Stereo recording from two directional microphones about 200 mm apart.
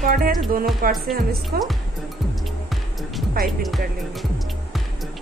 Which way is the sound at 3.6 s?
Centre (ahead or behind).